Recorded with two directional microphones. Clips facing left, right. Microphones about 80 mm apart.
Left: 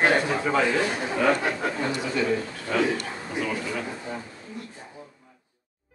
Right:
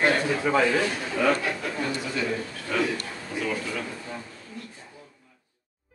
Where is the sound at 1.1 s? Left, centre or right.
Left.